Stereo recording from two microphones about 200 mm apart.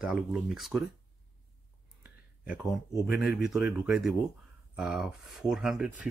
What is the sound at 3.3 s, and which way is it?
Speech, 5° right (ahead or behind).